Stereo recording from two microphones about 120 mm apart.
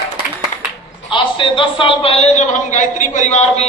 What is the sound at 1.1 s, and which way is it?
A man's voice, 45° left (ahead or behind).